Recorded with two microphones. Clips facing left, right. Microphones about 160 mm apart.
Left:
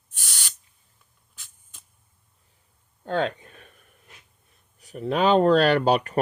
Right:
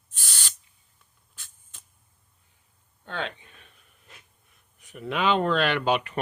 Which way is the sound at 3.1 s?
40° left (ahead or behind).